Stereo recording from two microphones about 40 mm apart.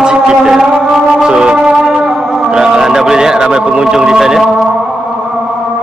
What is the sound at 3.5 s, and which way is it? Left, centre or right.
Speech, centre.